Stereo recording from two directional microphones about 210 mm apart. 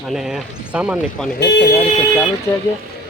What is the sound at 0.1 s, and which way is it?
Speech, centre (ahead or behind).